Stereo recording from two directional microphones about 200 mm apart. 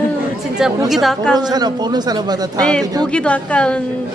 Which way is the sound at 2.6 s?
5° left (ahead or behind).